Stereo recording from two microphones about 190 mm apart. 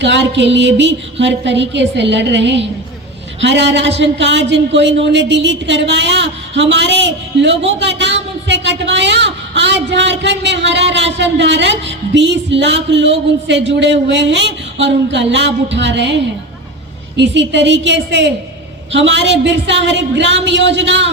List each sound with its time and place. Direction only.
0.0 s speech: 70° right (ahead or behind)
17.2 s speech: 70° right (ahead or behind)